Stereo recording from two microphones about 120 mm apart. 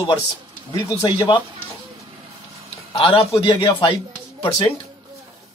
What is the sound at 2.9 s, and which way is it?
A man's voice, 50° left (ahead or behind).